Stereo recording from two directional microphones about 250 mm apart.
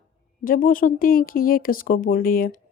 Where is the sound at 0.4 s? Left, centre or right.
Left.